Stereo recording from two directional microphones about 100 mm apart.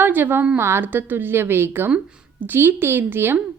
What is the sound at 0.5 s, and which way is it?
Speech, 25° right (ahead or behind).